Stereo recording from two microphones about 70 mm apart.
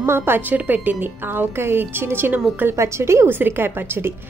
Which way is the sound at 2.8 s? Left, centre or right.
Right.